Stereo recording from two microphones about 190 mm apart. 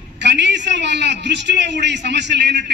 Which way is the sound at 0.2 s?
65° right (ahead or behind).